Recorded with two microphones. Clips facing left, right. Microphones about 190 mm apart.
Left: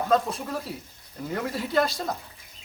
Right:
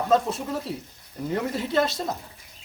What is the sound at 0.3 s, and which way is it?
Speech, 25° right (ahead or behind).